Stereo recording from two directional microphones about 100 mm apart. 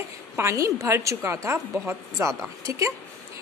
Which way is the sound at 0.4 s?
30° right (ahead or behind).